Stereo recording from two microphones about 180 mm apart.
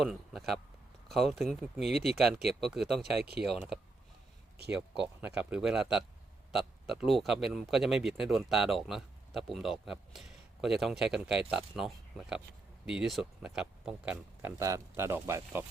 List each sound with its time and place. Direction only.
0.0 s speech: centre (ahead or behind)
3.0 s speech: 60° right (ahead or behind)
5.2 s speech: 5° right (ahead or behind)